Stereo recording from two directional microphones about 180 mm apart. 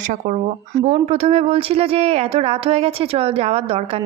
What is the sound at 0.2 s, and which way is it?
A woman's voice, 40° right (ahead or behind).